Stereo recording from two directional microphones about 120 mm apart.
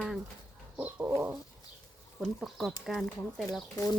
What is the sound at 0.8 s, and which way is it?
Bird, 15° right (ahead or behind).